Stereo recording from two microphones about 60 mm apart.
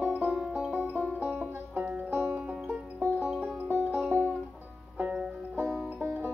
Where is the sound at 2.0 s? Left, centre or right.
Right.